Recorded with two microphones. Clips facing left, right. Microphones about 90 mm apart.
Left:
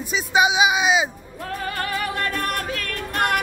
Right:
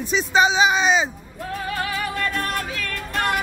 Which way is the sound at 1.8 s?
55° left (ahead or behind).